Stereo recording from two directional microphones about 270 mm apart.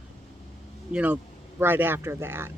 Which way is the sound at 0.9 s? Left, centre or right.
Centre.